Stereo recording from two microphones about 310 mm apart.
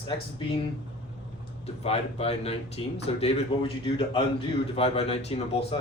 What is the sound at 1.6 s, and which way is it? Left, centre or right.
Speech, centre.